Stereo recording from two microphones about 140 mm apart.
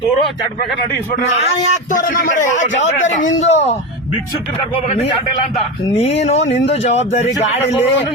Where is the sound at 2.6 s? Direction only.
60° left (ahead or behind).